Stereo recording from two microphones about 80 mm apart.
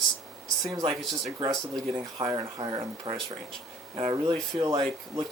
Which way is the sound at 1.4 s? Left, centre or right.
Right.